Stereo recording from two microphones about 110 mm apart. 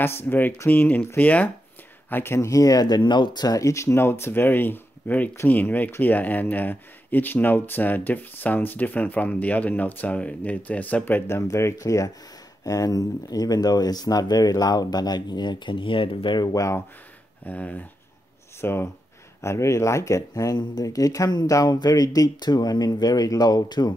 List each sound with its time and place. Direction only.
0.0 s speech: 20° left (ahead or behind); by 16.4 s 50° left (ahead or behind)
16.5 s speech: 25° left (ahead or behind)
17.5 s speech: 15° left (ahead or behind); by 23.9 s 40° left (ahead or behind)